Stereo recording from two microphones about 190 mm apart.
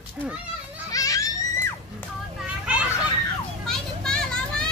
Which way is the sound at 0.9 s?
20° left (ahead or behind).